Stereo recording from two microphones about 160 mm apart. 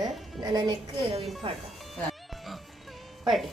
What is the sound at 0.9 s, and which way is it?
Speech, 35° right (ahead or behind).